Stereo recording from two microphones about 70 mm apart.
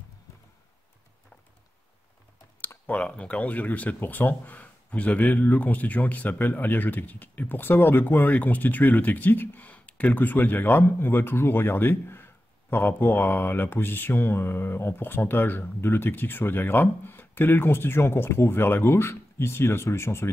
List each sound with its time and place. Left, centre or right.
2.9 s speech: centre; by 20.2 s left